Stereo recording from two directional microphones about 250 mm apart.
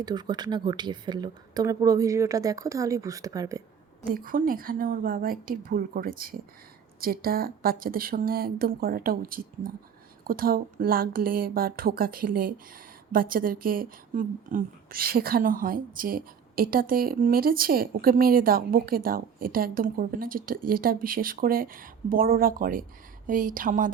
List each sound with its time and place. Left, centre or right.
0.0 s speech: centre
4.0 s speech: right